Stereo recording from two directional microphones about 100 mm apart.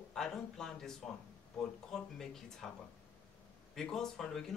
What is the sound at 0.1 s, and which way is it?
Speech, 5° left (ahead or behind).